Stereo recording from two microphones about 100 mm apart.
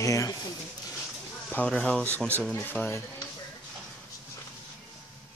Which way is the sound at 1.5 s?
10° left (ahead or behind).